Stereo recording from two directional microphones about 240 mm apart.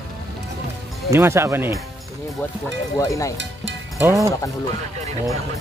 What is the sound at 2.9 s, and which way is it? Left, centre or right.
Speech, centre.